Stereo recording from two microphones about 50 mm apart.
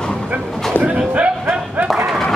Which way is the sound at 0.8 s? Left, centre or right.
Right.